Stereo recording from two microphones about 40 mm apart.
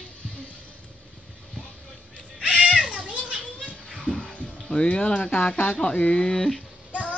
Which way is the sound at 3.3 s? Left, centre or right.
Right.